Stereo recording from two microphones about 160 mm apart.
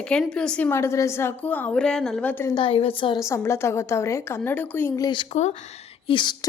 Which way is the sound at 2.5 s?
35° left (ahead or behind).